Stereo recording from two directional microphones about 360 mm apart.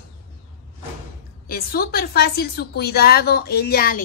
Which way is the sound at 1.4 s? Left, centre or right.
Left.